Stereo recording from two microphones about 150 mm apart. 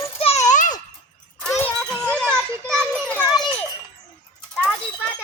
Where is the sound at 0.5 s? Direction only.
60° left (ahead or behind).